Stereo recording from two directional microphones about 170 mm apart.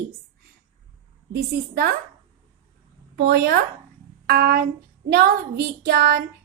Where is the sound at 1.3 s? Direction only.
65° right (ahead or behind).